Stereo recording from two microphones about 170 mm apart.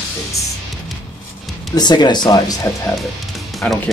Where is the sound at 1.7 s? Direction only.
25° left (ahead or behind).